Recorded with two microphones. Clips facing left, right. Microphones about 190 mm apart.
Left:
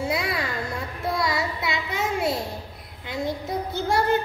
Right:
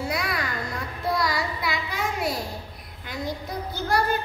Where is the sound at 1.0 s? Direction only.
25° left (ahead or behind).